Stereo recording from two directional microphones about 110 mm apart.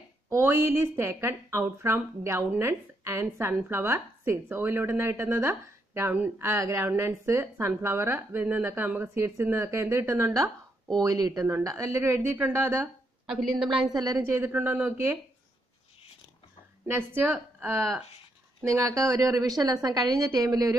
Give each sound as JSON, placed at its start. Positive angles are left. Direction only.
{"t": 0.3, "sound": "a woman's voice", "side_deg": -20}
{"t": 13.3, "sound": "a woman's voice", "side_deg": -5}
{"t": 13.9, "sound": "speech", "side_deg": -35}
{"t": 16.8, "sound": "a woman's voice", "side_deg": -20}
{"t": 18.6, "sound": "a woman's voice", "side_deg": -30}